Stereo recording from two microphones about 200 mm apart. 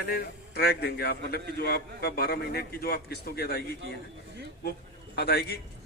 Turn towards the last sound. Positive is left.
turn(degrees=55)  # may be behind; listen again after turning